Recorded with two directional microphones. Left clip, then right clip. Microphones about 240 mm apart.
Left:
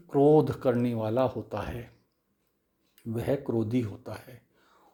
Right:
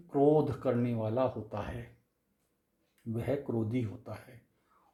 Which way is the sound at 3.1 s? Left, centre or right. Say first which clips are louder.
Left 5 dB; left.